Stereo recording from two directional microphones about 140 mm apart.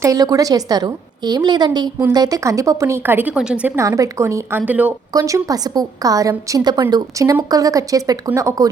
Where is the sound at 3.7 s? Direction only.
20° right (ahead or behind).